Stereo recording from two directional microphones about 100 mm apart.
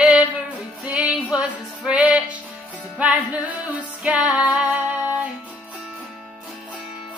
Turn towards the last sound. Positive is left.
turn(degrees=-15)  # may be behind; listen again after turning